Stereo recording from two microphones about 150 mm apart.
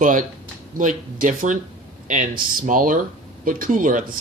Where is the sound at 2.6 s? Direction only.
65° right (ahead or behind).